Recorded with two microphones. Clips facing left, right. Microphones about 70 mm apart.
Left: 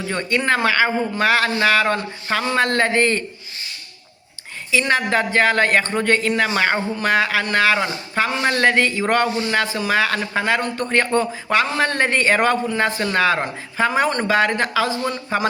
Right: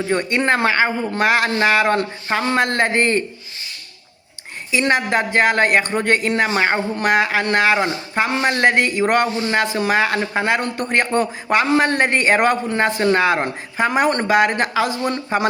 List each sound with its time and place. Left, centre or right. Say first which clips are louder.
0.1 s speech: right 1 dB; right
4.7 s speech: right 1 dB; right